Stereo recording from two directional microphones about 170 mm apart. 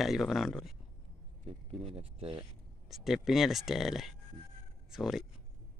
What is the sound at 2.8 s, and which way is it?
Speech, centre (ahead or behind).